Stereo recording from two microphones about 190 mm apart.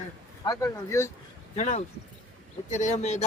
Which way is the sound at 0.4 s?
20° left (ahead or behind).